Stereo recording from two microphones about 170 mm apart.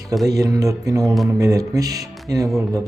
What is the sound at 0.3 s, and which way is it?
Speech, 20° right (ahead or behind).